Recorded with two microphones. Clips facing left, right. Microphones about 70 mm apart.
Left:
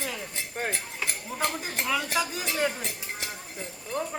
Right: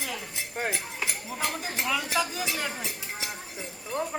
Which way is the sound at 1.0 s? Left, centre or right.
Left.